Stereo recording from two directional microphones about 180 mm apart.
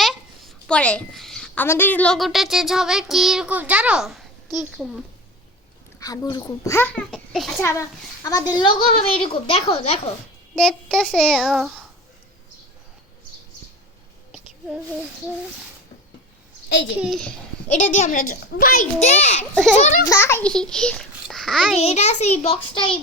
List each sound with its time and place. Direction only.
0.0 s a child's voice: centre (ahead or behind)
6.0 s a child's voice: 20° left (ahead or behind); by 7.6 s centre (ahead or behind)
7.6 s a woman's voice: 15° left (ahead or behind); by 10.0 s 35° left (ahead or behind)
10.5 s child singing: centre (ahead or behind)
17.0 s child singing: centre (ahead or behind)
17.7 s a woman's voice: 40° left (ahead or behind)
19.1 s a woman's voice: 35° left (ahead or behind)
20.1 s a child's voice: 15° left (ahead or behind)
20.5 s a child's voice: 5° left (ahead or behind)
21.8 s a woman's voice: 35° left (ahead or behind)